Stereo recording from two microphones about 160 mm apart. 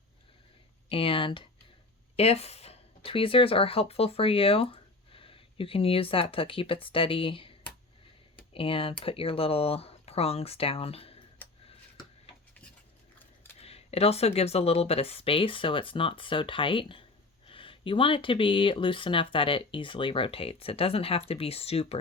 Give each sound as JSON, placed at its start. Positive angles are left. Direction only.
{"t": 0.9, "sound": "a sound", "side_deg": 35}
{"t": 2.1, "sound": "speech", "side_deg": 40}
{"t": 8.5, "sound": "speech", "side_deg": 35}
{"t": 13.6, "sound": "speech", "side_deg": 40}